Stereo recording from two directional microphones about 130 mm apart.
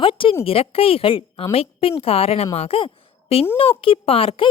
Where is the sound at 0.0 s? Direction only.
45° left (ahead or behind).